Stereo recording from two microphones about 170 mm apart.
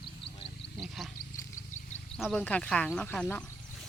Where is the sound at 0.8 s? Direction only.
Centre (ahead or behind).